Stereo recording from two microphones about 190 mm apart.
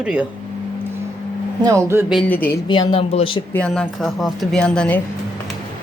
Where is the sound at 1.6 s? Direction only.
15° right (ahead or behind).